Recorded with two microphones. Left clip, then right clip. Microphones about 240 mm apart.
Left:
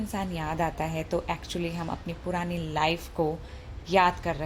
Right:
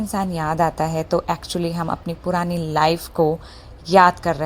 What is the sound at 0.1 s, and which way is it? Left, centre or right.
A woman's voice, right.